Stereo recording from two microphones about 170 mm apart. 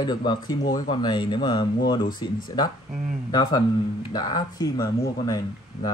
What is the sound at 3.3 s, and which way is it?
Speech, 25° left (ahead or behind).